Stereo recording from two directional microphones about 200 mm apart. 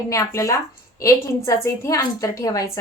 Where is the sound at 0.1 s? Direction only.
15° left (ahead or behind).